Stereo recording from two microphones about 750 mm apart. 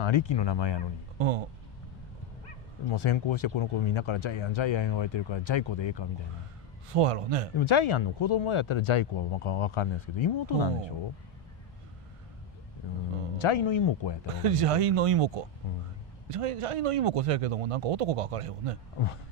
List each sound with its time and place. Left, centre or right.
0.0 s speech: left
2.9 s speech: left
6.9 s speech: right
7.5 s speech: left
13.4 s speech: left
14.3 s speech: right